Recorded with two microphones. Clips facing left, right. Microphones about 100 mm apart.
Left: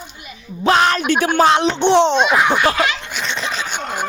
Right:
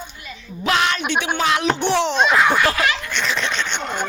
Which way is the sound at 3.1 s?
Centre (ahead or behind).